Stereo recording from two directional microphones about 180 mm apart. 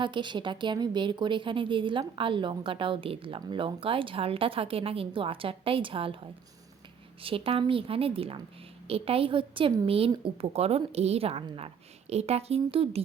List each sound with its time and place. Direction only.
0.0 s a woman's voice: 25° right (ahead or behind)
7.2 s a woman's voice: 30° right (ahead or behind)